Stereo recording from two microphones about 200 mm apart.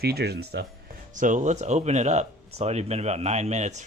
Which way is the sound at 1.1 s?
40° right (ahead or behind).